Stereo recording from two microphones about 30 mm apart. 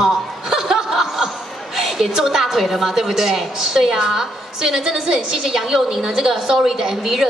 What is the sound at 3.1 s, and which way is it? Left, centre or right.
A woman's voice, centre.